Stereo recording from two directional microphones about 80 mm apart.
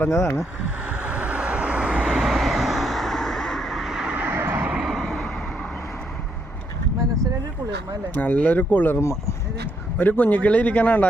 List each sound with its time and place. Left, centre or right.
0.0 s speech: left
0.9 s vehicle: centre
4.1 s vehicle: right
4.7 s vehicle: centre
8.1 s a man's voice: left
10.0 s a man's voice: left